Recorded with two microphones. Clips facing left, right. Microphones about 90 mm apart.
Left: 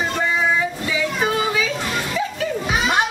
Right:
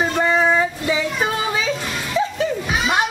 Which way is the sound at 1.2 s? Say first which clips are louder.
Left 1 dB; 30° right (ahead or behind).